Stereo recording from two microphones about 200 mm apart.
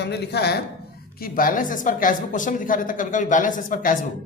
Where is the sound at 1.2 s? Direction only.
45° left (ahead or behind).